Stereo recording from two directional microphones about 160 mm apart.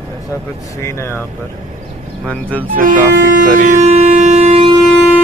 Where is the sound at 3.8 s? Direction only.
45° right (ahead or behind).